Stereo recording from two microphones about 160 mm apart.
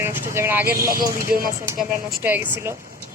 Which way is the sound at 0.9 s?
60° right (ahead or behind).